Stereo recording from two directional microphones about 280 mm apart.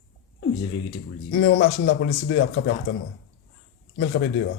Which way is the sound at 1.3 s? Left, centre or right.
Left.